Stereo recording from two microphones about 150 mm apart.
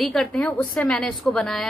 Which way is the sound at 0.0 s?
5° left (ahead or behind).